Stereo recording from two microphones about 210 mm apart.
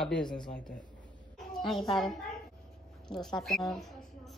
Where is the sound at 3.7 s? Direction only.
Centre (ahead or behind).